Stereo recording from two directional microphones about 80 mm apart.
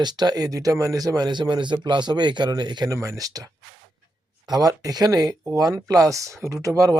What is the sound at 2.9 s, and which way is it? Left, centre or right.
Speech, right.